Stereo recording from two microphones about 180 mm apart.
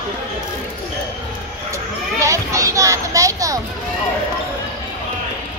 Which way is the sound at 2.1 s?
15° right (ahead or behind).